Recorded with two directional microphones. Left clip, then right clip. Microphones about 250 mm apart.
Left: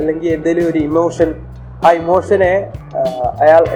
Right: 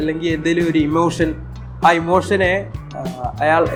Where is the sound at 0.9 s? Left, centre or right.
Right.